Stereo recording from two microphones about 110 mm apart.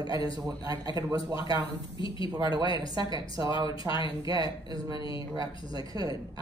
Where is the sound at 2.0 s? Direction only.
50° left (ahead or behind).